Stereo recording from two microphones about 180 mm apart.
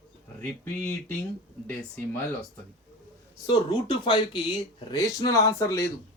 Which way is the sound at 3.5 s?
25° left (ahead or behind).